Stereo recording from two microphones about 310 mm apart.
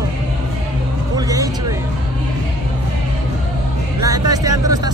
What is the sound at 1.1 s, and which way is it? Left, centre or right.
Vehicle, centre.